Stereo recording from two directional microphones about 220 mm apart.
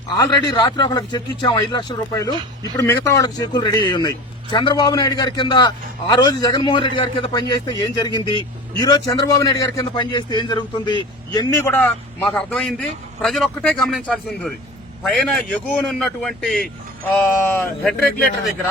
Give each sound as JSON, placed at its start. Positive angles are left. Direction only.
{"t": 0.2, "sound": "a man's voice", "side_deg": 20}